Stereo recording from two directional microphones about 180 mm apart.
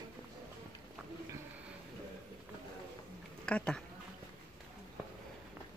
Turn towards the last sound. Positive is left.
turn(degrees=5)  # may be behind; listen again after turning